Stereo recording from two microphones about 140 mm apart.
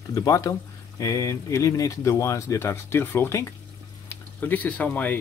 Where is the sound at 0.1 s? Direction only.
25° left (ahead or behind).